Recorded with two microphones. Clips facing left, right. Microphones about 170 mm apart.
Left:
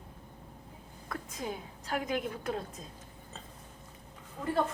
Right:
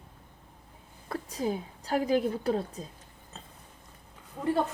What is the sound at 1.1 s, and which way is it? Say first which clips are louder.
A woman's voice: right 7 dB; 35° right (ahead or behind).